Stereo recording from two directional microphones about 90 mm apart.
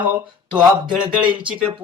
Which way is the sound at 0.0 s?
15° right (ahead or behind).